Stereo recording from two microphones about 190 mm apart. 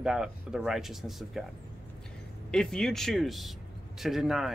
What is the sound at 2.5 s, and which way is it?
Speech, 5° left (ahead or behind).